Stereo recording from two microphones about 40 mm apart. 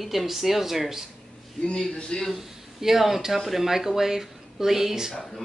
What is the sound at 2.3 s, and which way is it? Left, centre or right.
Speech, centre.